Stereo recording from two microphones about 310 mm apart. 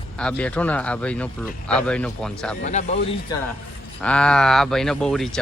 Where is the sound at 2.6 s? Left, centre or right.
Left.